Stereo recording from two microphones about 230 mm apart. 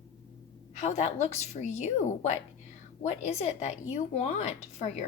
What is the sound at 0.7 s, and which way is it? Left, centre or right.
Speech, left.